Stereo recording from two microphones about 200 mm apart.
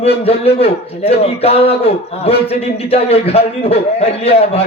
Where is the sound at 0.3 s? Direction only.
30° left (ahead or behind).